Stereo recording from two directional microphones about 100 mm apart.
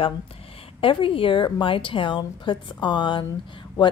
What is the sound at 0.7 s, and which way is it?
A woman's voice, 60° left (ahead or behind).